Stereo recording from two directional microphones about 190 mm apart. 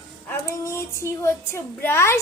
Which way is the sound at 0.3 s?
15° left (ahead or behind).